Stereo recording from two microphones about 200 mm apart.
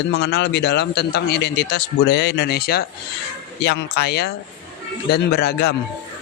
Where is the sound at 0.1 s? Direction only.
55° left (ahead or behind).